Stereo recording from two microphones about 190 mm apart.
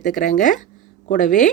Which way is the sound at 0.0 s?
40° left (ahead or behind).